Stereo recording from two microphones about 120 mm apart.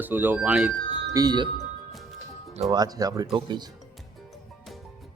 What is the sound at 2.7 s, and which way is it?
Speech, 35° right (ahead or behind).